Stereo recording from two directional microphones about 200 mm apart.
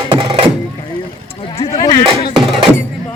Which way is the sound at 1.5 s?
30° left (ahead or behind).